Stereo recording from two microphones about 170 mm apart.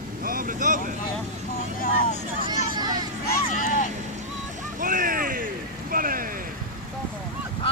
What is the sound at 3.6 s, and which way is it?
Vehicle, 50° left (ahead or behind).